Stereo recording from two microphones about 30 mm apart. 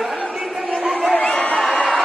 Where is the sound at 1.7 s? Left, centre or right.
Left.